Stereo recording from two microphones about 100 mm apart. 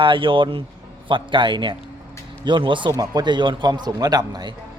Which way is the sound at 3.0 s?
40° right (ahead or behind).